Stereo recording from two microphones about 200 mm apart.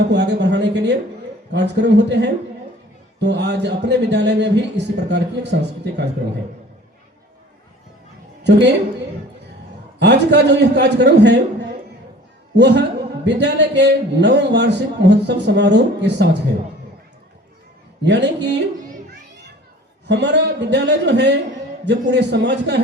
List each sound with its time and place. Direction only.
0.1 s a sound: 60° right (ahead or behind)
1.5 s a man's voice: 60° right (ahead or behind)
10.0 s a man's voice: 60° right (ahead or behind)
12.5 s a man's voice: 60° right (ahead or behind)
18.0 s a man's voice: 60° right (ahead or behind)
20.1 s a man's voice: 60° right (ahead or behind)